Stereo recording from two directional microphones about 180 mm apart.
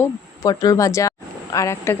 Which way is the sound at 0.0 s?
20° left (ahead or behind).